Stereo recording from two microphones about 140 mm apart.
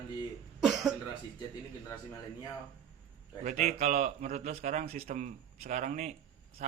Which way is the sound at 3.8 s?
55° right (ahead or behind).